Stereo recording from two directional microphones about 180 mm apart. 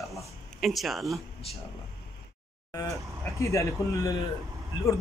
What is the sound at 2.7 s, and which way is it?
A man's voice, 20° left (ahead or behind).